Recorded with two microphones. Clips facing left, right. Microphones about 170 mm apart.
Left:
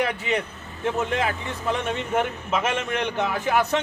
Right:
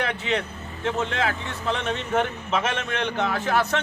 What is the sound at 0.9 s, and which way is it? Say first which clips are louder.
A man's voice: left 1 dB; 15° left (ahead or behind).